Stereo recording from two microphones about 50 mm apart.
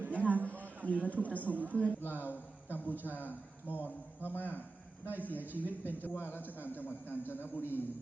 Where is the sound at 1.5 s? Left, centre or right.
Right.